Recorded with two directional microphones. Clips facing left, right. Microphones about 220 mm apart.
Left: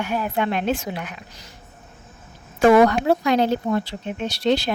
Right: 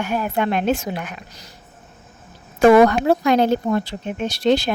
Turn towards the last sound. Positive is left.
turn(degrees=-50)  # may be behind; listen again after turning